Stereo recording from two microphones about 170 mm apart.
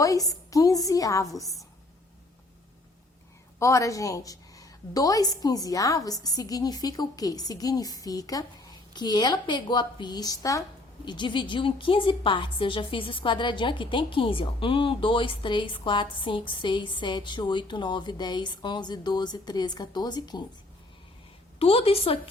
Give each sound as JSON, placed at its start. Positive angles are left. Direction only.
{"t": 0.0, "sound": "a woman's voice", "side_deg": 20}
{"t": 1.4, "sound": "a woman's voice", "side_deg": 0}
{"t": 3.6, "sound": "a woman's voice", "side_deg": 20}
{"t": 21.6, "sound": "a woman's voice", "side_deg": 35}